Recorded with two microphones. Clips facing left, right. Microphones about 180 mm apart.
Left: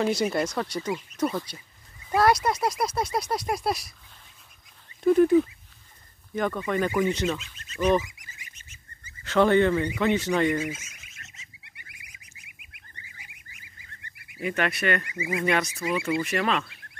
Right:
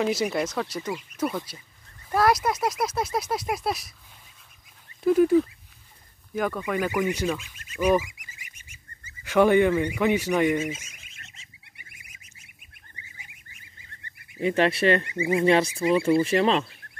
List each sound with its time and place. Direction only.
0.0 s speech: centre (ahead or behind)
5.0 s speech: 5° right (ahead or behind)
9.2 s speech: 10° right (ahead or behind)
10.6 s a sound: 25° right (ahead or behind)
11.9 s goose: 25° right (ahead or behind)
14.3 s speech: 30° right (ahead or behind)